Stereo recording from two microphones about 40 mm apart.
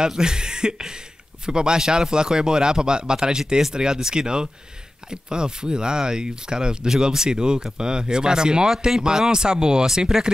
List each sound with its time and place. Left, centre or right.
0.0 s speech: centre